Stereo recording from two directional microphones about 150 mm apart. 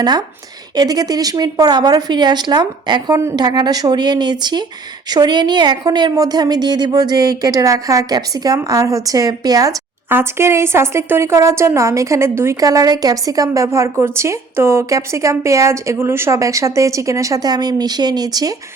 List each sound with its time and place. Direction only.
0.8 s a woman's voice: 25° right (ahead or behind)